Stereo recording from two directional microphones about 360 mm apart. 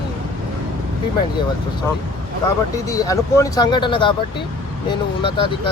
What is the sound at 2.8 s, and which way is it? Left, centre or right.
Speech, centre.